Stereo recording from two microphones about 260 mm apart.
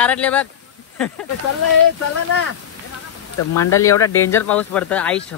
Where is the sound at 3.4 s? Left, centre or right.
Left.